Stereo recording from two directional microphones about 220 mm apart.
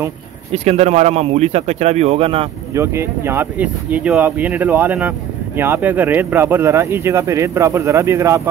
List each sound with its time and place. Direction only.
0.5 s speech: 30° right (ahead or behind)
2.7 s speech: 10° right (ahead or behind)